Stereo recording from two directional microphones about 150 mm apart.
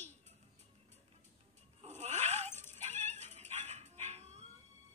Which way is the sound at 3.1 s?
50° right (ahead or behind).